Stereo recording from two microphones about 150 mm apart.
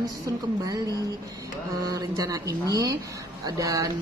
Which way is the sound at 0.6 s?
25° right (ahead or behind).